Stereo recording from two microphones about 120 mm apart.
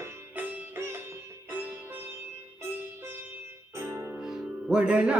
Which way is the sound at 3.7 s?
20° right (ahead or behind).